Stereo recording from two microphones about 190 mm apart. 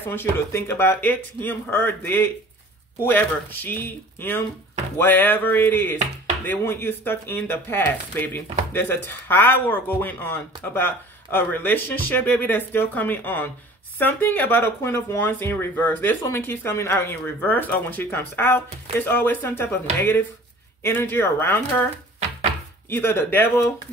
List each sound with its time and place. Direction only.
0.0 s speech: 10° left (ahead or behind)
22.8 s speech: 10° left (ahead or behind)